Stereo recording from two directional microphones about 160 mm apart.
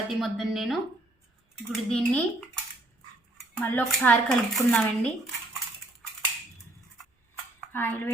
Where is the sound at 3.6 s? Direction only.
10° left (ahead or behind).